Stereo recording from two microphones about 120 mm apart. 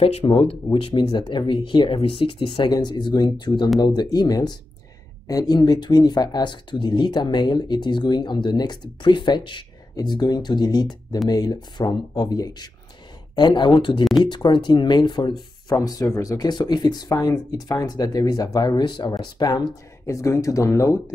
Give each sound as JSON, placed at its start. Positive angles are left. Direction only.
{"t": 0.0, "sound": "speech", "side_deg": 50}